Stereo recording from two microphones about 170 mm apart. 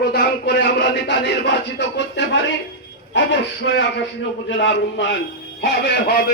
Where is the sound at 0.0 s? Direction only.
75° left (ahead or behind).